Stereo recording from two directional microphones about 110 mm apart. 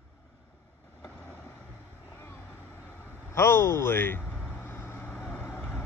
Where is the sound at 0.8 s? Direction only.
20° left (ahead or behind).